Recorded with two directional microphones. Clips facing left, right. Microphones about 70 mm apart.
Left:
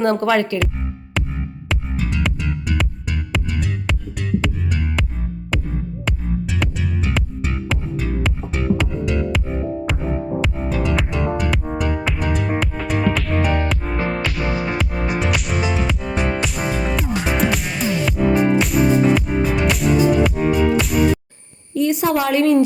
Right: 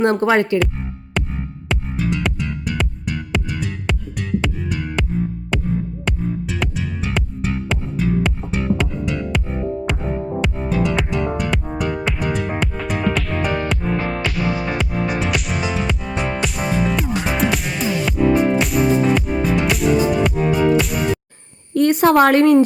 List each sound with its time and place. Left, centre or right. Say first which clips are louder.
0.0 s speech: right 1 dB; right
1.2 s music: right 1 dB; centre
21.8 s a sound: right 5 dB; right